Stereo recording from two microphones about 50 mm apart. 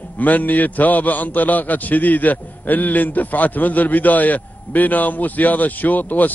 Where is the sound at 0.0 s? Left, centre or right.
Left.